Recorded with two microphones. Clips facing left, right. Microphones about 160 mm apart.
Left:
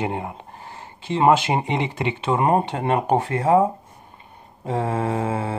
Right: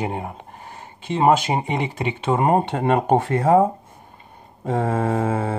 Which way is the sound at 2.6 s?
45° right (ahead or behind).